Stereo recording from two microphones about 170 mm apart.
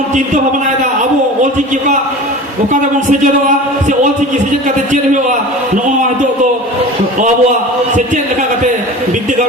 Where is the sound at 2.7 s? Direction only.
50° right (ahead or behind).